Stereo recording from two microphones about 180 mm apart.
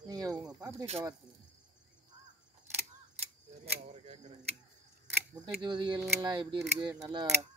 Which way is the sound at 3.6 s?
40° right (ahead or behind).